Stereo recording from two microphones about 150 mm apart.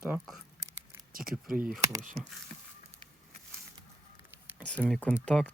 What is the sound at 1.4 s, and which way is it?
Speech, 10° right (ahead or behind).